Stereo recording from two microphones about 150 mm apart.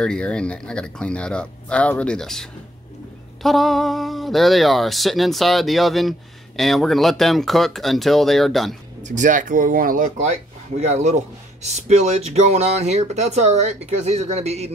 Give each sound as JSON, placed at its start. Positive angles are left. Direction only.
{"t": 0.0, "sound": "speech", "side_deg": 5}
{"t": 3.4, "sound": "speech", "side_deg": 0}
{"t": 9.0, "sound": "speech", "side_deg": -55}
{"t": 10.8, "sound": "a man's voice", "side_deg": -50}